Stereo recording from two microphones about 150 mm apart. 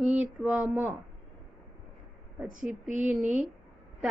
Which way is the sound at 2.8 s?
55° right (ahead or behind).